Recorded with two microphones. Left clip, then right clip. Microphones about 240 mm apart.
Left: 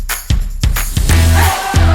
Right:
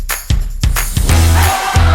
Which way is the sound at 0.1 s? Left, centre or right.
Centre.